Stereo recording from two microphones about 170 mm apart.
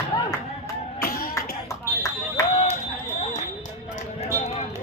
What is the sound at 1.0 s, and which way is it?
Music, 65° left (ahead or behind).